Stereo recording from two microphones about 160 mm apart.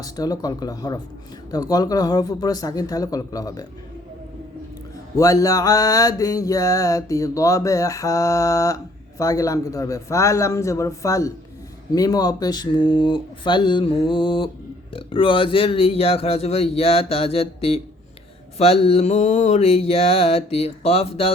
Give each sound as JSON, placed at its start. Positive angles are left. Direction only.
{"t": 0.0, "sound": "mantra", "side_deg": 25}
{"t": 5.1, "sound": "mantra", "side_deg": 20}
{"t": 14.9, "sound": "a man's voice", "side_deg": 35}